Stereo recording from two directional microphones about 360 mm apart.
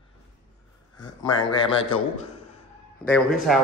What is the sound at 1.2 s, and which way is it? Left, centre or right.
A man's voice, centre.